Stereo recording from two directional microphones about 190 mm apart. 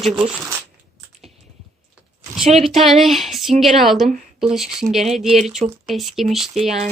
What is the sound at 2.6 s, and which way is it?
Speech, centre (ahead or behind).